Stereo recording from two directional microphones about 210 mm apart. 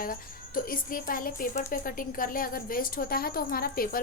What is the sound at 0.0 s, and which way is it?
A woman's voice, 40° left (ahead or behind).